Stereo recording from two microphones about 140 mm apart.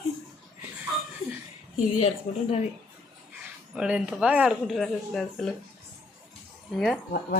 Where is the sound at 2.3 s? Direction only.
50° left (ahead or behind).